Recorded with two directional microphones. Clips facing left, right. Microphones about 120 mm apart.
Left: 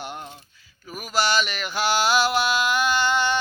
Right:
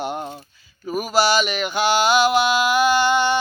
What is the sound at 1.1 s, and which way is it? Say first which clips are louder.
Mantra: right 4 dB; 5° right (ahead or behind).